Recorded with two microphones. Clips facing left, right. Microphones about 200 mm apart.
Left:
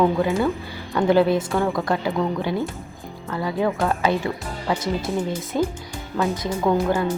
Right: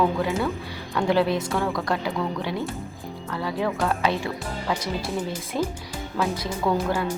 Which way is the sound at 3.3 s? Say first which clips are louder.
Left 4 dB; centre (ahead or behind).